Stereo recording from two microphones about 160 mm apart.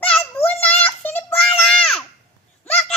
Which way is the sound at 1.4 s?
5° left (ahead or behind).